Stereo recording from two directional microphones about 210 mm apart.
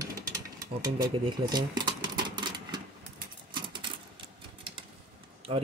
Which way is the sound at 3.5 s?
20° right (ahead or behind).